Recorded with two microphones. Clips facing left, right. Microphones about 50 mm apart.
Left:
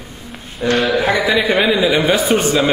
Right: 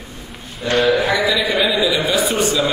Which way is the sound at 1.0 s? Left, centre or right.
Left.